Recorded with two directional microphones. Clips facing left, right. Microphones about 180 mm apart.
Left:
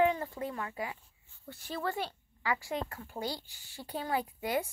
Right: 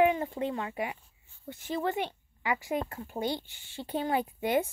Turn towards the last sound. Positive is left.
turn(degrees=-25)  # may be behind; listen again after turning